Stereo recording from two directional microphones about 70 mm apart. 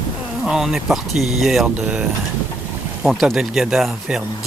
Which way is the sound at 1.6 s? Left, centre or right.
Centre.